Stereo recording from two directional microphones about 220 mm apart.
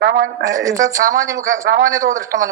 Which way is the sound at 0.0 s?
55° right (ahead or behind).